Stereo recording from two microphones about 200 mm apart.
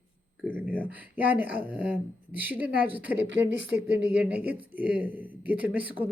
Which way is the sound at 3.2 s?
60° right (ahead or behind).